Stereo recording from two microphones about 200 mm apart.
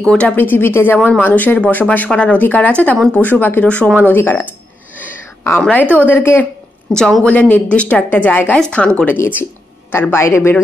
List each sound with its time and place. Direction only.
0.0 s speech: 5° left (ahead or behind)